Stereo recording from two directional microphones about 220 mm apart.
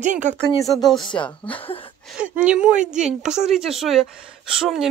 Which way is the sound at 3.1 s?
30° right (ahead or behind).